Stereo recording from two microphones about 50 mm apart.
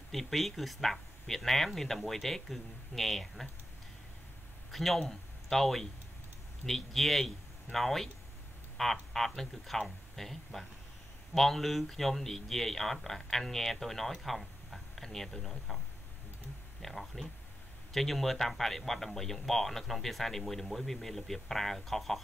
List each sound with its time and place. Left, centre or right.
0.1 s speech: centre
4.6 s speech: centre
16.8 s speech: centre